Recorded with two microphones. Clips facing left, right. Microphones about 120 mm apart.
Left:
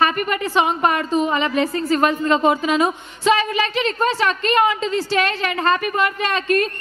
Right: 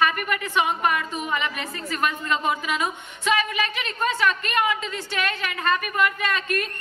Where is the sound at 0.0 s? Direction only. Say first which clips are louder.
Left 4 dB; 30° left (ahead or behind).